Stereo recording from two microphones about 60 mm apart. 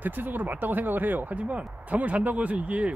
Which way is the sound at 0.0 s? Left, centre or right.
Right.